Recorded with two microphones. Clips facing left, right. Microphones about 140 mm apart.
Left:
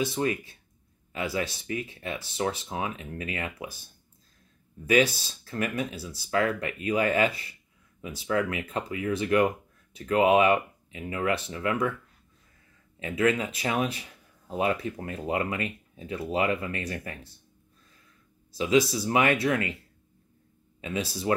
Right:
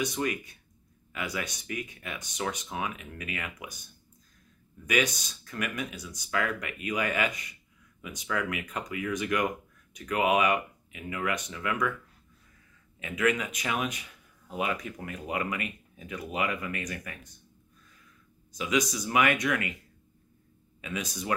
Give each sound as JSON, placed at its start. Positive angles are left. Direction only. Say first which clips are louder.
{"t": 0.0, "sound": "speech", "louder": "left 3 dB", "side_deg": 30}
{"t": 13.0, "sound": "speech", "louder": "left 3 dB", "side_deg": 30}
{"t": 18.5, "sound": "speech", "louder": "left 6 dB", "side_deg": 30}
{"t": 20.8, "sound": "speech", "louder": "left 5 dB", "side_deg": 30}